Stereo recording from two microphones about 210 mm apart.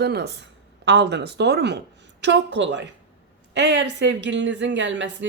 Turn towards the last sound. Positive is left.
turn(degrees=-60)  # may be behind; listen again after turning